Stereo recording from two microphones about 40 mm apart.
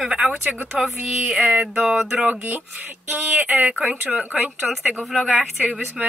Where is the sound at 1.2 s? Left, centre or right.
Right.